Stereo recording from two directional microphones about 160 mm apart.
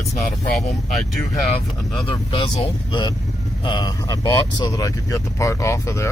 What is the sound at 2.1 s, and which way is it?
Speech, 30° left (ahead or behind).